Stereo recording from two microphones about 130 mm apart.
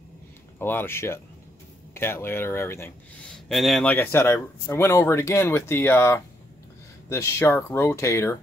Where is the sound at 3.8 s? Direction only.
15° left (ahead or behind).